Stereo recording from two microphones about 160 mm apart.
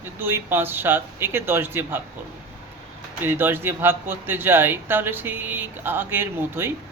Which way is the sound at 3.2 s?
15° right (ahead or behind).